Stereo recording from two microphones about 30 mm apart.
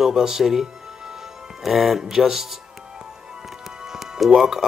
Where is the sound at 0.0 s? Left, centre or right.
Centre.